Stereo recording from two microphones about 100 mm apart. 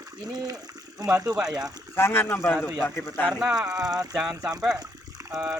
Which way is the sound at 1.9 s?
20° left (ahead or behind).